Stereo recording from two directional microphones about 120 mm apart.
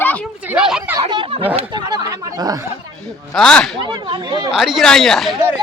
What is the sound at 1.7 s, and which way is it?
Speech, 35° right (ahead or behind).